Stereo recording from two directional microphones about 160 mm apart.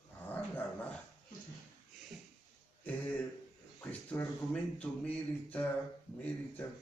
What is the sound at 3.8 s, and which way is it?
A woman's voice, 10° left (ahead or behind).